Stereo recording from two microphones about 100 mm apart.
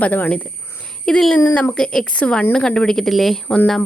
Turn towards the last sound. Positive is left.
turn(degrees=5)  # may be behind; listen again after turning